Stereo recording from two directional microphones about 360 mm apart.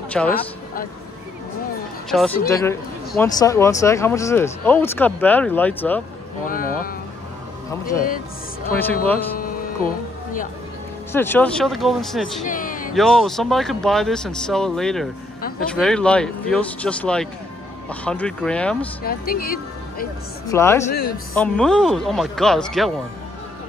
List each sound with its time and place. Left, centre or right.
0.1 s speech: centre
2.0 s speech: centre
6.4 s a sound: left
8.7 s speech: centre
9.4 s music: left
11.1 s speech: centre
12.4 s a sound: left
12.9 s speech: centre
19.0 s speech: left
20.4 s speech: centre